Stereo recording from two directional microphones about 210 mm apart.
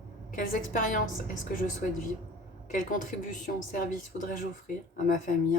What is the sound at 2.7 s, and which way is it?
A woman's voice, 40° left (ahead or behind).